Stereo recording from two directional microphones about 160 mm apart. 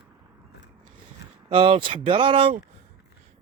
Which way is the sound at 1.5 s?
35° right (ahead or behind).